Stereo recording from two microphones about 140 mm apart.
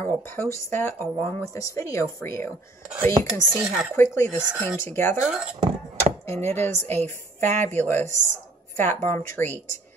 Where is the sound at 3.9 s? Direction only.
20° left (ahead or behind).